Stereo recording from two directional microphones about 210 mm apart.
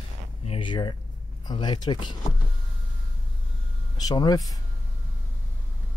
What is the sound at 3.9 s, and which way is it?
Speech, 20° left (ahead or behind).